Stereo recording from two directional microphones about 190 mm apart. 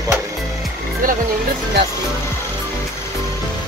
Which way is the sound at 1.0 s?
45° right (ahead or behind).